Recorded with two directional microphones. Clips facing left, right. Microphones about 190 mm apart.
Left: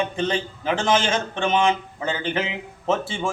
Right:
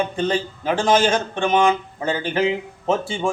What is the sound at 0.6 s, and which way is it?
A man's voice, 40° right (ahead or behind).